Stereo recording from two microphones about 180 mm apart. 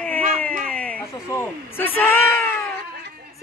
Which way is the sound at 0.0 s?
10° left (ahead or behind).